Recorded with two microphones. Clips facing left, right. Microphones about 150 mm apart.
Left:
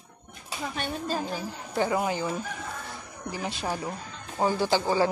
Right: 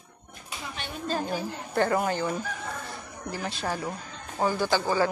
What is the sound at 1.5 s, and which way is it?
Speech, 5° left (ahead or behind).